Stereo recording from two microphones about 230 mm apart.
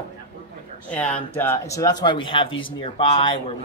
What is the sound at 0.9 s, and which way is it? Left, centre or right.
Speech, centre.